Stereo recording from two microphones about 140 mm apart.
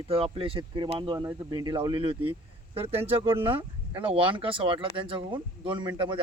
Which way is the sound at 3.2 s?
20° right (ahead or behind).